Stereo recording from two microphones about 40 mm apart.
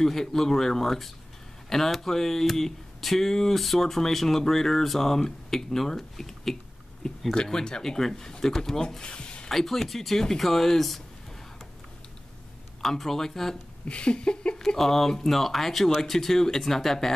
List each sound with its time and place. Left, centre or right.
0.0 s speech: centre
7.3 s speech: centre
9.0 s a sound: left
9.5 s speech: centre
12.8 s speech: centre
13.8 s a sound: left
14.8 s speech: centre